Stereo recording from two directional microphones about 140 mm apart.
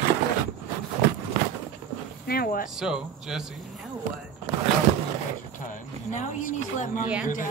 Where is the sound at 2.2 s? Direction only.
90° left.